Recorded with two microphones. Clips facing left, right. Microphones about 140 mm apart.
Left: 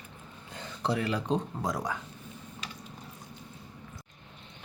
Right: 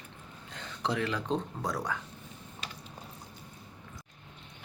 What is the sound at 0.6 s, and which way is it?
Speech, 5° left (ahead or behind).